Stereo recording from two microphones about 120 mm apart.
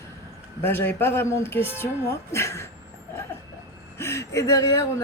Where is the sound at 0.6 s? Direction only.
20° left (ahead or behind).